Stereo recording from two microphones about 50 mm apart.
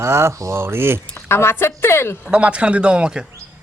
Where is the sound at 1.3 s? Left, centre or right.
Left.